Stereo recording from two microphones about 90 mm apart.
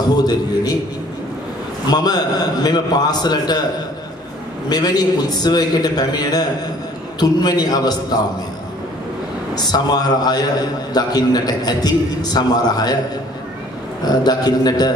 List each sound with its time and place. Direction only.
0.1 s a man's voice: 50° left (ahead or behind)
1.9 s a man's voice: 50° left (ahead or behind)
4.6 s a man's voice: 50° left (ahead or behind)
9.6 s a man's voice: 50° left (ahead or behind)
14.0 s a man's voice: 50° left (ahead or behind)